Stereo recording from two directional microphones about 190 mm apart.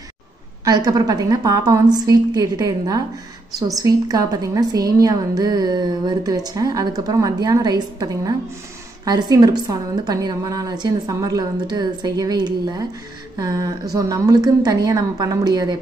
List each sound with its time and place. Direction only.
0.7 s a woman's voice: 20° right (ahead or behind)